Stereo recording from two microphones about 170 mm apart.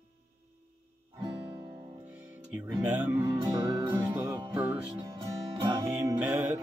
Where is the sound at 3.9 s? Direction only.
15° right (ahead or behind).